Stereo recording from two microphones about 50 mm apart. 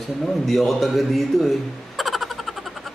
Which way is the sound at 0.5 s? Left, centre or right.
Centre.